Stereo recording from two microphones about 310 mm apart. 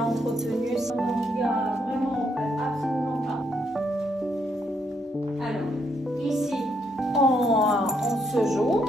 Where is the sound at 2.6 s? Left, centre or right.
Centre.